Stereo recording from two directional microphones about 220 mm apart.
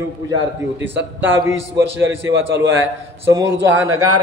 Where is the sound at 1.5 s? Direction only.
10° right (ahead or behind).